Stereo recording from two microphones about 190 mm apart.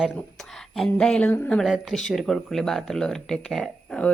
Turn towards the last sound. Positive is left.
turn(degrees=5)  # may be behind; listen again after turning